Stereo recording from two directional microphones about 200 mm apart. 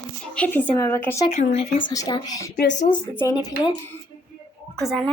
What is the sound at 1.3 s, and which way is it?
Speech, 35° left (ahead or behind).